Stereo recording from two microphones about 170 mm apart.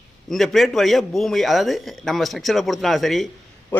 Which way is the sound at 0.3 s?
Centre (ahead or behind).